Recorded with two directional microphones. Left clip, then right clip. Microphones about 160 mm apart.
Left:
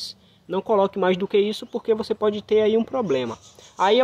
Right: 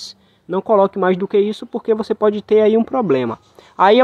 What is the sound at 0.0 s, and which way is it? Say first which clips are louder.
Speech: right 1 dB; 30° right (ahead or behind).